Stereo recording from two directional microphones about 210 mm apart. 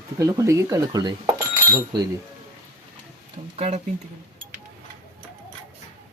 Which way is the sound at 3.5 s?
30° right (ahead or behind).